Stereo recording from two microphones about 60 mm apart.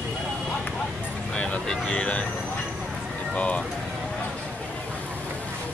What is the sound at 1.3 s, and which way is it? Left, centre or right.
Speech, centre.